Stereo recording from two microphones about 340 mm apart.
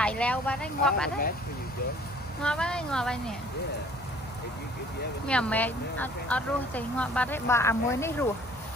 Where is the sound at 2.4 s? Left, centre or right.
Centre.